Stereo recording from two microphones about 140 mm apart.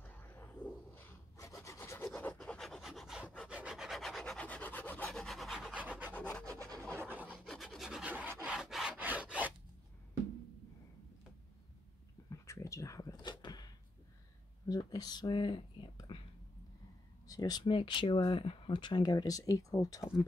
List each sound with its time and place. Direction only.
0.0 s rub: 15° left (ahead or behind)
2.0 s filing: 5° left (ahead or behind)
3.4 s rub: 5° right (ahead or behind); by 5.1 s 10° left (ahead or behind)
5.1 s rub: centre (ahead or behind)
6.1 s rub: 10° left (ahead or behind)
6.4 s rub: 20° right (ahead or behind)
6.9 s filing: 15° right (ahead or behind)
7.3 s rub: centre (ahead or behind)
12.3 s a sound: 20° left (ahead or behind)
14.7 s speech: 30° left (ahead or behind)
17.3 s speech: 25° left (ahead or behind)